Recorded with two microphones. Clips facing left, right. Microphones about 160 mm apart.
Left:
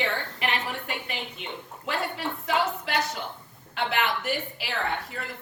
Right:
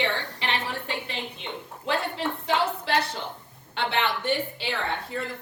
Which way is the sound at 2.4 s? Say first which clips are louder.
Even; 30° right (ahead or behind).